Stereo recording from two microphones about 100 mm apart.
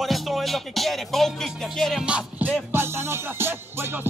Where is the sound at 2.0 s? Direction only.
10° right (ahead or behind).